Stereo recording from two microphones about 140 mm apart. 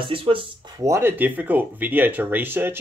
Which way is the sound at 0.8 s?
20° right (ahead or behind).